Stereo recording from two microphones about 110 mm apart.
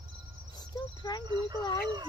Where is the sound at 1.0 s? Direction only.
40° left (ahead or behind).